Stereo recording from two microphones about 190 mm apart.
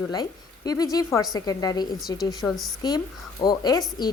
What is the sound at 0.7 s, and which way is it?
Speech, 20° left (ahead or behind).